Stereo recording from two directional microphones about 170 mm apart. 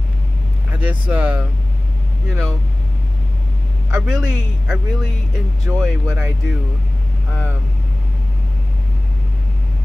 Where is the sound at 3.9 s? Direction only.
5° right (ahead or behind).